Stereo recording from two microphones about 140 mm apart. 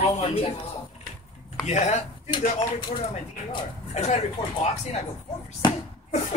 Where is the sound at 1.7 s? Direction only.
55° left (ahead or behind).